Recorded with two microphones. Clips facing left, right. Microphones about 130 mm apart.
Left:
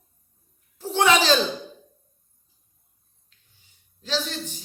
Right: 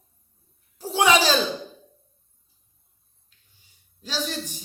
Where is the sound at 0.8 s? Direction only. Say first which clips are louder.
Even; 10° right (ahead or behind).